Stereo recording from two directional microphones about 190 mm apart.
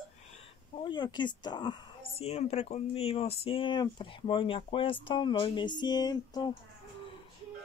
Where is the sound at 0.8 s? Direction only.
25° left (ahead or behind).